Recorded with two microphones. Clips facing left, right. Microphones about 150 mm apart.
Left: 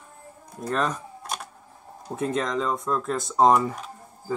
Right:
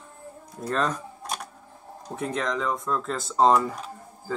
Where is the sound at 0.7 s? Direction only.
5° left (ahead or behind).